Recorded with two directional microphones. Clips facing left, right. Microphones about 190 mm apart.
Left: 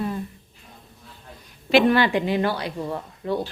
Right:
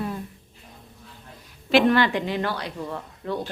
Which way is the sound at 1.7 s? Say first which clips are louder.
Left 1 dB; 5° left (ahead or behind).